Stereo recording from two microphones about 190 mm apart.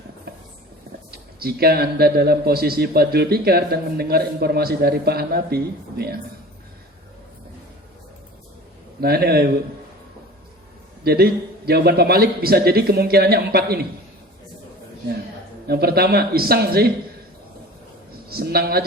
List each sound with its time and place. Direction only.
1.1 s a man's voice: 55° right (ahead or behind)
9.0 s a man's voice: 55° right (ahead or behind)
11.0 s a man's voice: 55° right (ahead or behind)
15.6 s a man's voice: 55° right (ahead or behind)
18.3 s a woman's voice: 55° right (ahead or behind)